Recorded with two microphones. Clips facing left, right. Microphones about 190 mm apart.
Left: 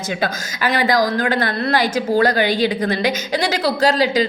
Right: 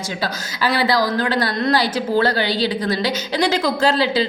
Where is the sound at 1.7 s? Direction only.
50° left (ahead or behind).